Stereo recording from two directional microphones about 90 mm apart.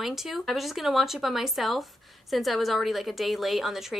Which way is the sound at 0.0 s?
5° right (ahead or behind).